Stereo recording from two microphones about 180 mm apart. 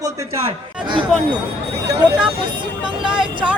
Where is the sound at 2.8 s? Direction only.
5° right (ahead or behind).